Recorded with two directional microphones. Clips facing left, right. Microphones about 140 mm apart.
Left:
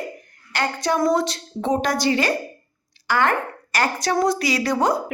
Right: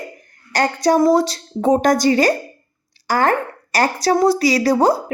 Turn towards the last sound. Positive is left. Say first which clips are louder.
# right 5 dB
turn(degrees=-35)  # may be behind; listen again after turning